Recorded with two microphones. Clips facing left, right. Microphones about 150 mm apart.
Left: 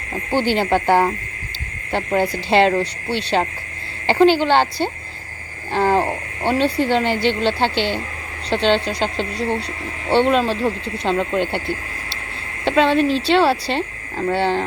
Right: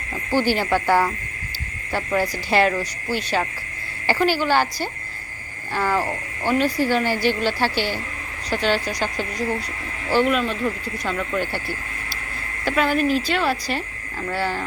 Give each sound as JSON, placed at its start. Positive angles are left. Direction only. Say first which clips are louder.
{"t": 0.1, "sound": "speech", "louder": "left 2 dB", "side_deg": 20}
{"t": 2.5, "sound": "speech", "louder": "left 4 dB", "side_deg": 25}